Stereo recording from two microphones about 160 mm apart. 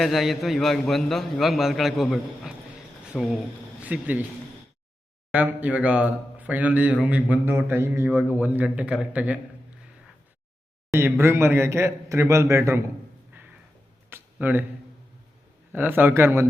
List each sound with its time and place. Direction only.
0.0 s a man's voice: centre (ahead or behind)
5.3 s a man's voice: 10° right (ahead or behind)
10.9 s a man's voice: 15° right (ahead or behind)
14.1 s a sound: 10° right (ahead or behind)
15.7 s a man's voice: 15° right (ahead or behind)